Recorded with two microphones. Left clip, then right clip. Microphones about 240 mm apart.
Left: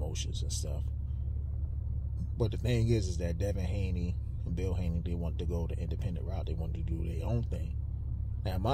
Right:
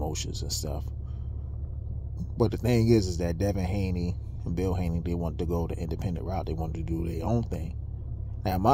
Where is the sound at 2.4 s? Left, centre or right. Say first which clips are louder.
Right 8 dB; right.